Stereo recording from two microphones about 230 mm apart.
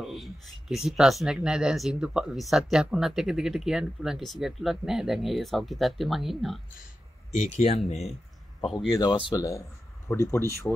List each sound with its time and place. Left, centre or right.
0.0 s a sound: centre
0.8 s speech: centre
7.3 s speech: left
8.6 s speech: centre